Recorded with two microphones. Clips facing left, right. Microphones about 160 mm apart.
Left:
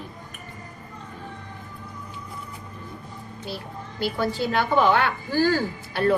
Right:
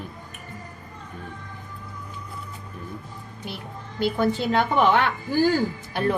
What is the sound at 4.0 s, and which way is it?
A woman's voice, 20° right (ahead or behind).